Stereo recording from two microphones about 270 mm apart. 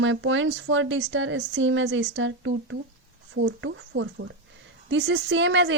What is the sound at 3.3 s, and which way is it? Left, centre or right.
Speech, right.